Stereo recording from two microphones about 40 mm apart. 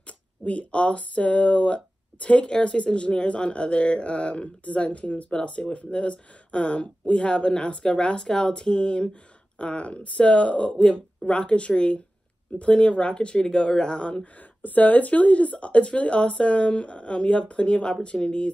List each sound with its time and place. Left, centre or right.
0.0 s speech: left
14.6 s speech: left